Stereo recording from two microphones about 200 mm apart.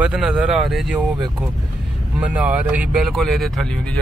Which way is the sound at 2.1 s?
5° right (ahead or behind).